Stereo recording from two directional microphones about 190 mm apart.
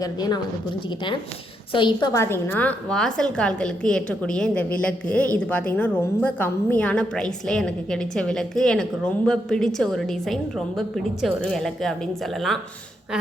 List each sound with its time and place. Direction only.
0.0 s a woman's voice: 20° left (ahead or behind)
1.7 s a woman's voice: 25° left (ahead or behind); by 12.5 s centre (ahead or behind)